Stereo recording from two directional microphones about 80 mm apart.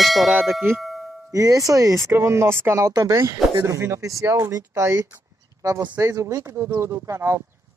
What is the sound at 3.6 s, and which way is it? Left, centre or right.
Speech, right.